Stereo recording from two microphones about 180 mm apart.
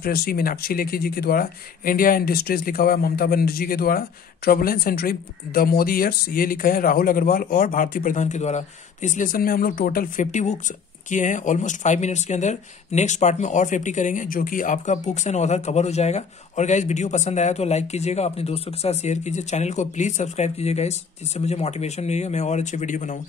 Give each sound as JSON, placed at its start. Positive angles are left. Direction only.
{"t": 0.0, "sound": "speech", "side_deg": 55}